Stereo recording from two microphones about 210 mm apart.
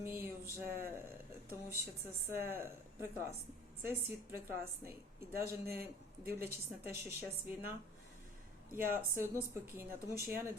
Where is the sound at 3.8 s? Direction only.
10° right (ahead or behind).